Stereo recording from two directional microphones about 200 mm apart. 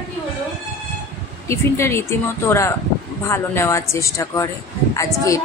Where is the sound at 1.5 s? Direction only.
15° left (ahead or behind).